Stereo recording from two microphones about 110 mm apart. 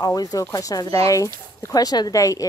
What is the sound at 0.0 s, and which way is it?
Speech, 35° left (ahead or behind).